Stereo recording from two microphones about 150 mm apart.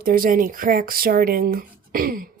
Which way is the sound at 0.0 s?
70° right (ahead or behind).